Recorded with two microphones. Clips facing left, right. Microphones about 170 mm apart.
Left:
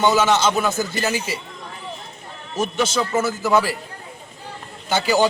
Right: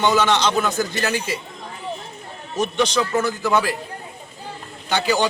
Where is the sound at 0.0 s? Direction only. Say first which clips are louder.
Left 1 dB; 5° left (ahead or behind).